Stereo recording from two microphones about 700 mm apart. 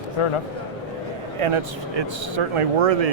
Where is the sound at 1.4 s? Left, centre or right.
Right.